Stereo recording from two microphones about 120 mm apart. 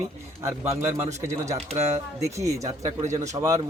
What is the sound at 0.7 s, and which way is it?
Speech, 70° right (ahead or behind).